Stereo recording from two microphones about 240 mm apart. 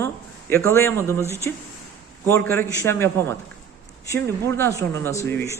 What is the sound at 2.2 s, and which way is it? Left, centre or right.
A man's voice, centre.